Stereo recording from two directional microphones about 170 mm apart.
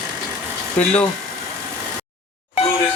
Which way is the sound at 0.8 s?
5° left (ahead or behind).